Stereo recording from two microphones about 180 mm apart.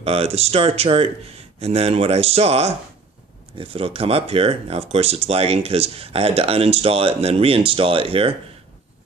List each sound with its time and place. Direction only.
0.0 s speech: 35° right (ahead or behind)